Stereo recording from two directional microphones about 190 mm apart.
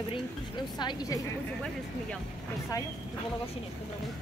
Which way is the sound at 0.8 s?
20° left (ahead or behind).